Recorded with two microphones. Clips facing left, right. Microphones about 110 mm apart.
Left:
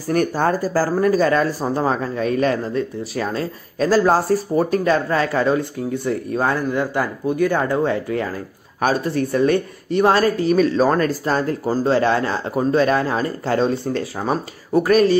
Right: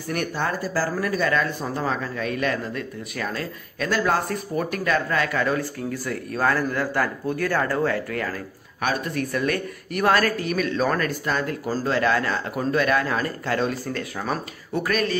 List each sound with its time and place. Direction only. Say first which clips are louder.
0.1 s speech: left 8 dB; 40° left (ahead or behind)